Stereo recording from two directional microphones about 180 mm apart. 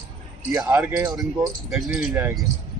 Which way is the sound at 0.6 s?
15° right (ahead or behind).